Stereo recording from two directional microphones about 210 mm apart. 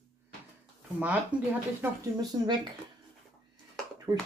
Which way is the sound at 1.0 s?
5° right (ahead or behind).